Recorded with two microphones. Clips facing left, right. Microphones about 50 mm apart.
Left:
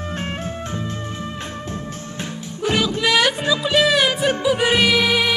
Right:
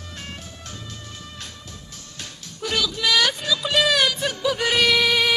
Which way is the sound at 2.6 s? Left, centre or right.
Left.